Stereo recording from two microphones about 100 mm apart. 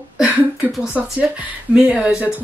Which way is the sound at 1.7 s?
10° right (ahead or behind).